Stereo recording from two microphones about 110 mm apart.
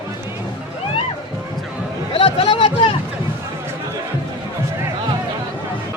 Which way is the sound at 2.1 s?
50° left (ahead or behind).